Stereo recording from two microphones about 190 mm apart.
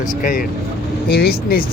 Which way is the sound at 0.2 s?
45° left (ahead or behind).